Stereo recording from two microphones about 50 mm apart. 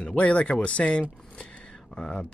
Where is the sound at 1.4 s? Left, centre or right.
Centre.